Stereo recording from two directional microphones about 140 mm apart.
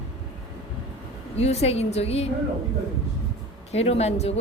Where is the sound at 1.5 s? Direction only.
50° left (ahead or behind).